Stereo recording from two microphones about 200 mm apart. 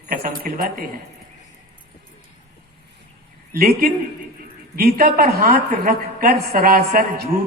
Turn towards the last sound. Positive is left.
turn(degrees=-45)  # may be behind; listen again after turning